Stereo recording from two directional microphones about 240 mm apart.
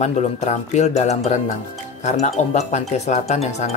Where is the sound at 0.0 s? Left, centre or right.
Left.